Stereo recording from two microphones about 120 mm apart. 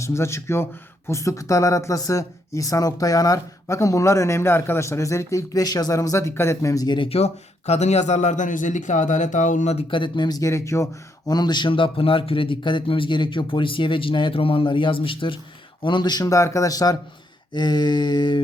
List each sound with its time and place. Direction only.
0.0 s speech: 25° left (ahead or behind); by 7.3 s 50° left (ahead or behind)
7.7 s speech: 70° left (ahead or behind)
9.9 s speech: 40° left (ahead or behind); by 10.8 s 25° left (ahead or behind)
11.3 s speech: 35° left (ahead or behind)